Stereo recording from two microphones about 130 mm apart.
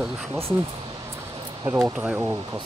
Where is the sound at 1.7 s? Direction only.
25° right (ahead or behind).